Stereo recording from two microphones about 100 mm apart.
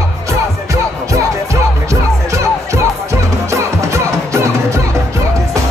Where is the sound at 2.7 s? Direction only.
30° right (ahead or behind).